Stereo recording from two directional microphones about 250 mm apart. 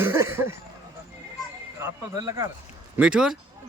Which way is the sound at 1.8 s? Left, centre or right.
Centre.